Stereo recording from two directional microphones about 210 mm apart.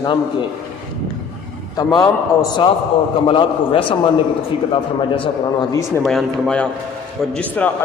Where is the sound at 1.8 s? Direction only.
15° left (ahead or behind).